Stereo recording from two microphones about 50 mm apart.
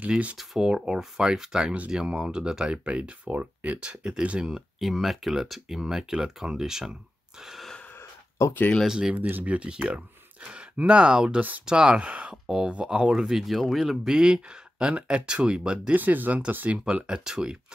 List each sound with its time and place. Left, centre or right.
0.4 s speech: centre; by 3.8 s right
3.8 s speech: centre
4.4 s speech: centre
7.4 s a sound: centre
8.8 s speech: centre
9.1 s speech: right
12.4 s speech: centre
14.1 s speech: centre
15.9 s speech: right
16.8 s speech: centre